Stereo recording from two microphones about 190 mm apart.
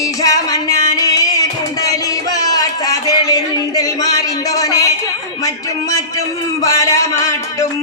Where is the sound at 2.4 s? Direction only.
20° left (ahead or behind).